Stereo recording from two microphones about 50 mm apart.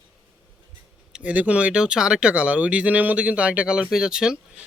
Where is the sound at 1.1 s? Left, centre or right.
Right.